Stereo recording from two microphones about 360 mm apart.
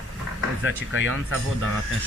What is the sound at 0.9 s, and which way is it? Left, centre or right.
Speech, right.